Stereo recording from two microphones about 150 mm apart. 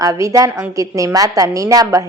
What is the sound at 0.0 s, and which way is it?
Speech, 20° right (ahead or behind).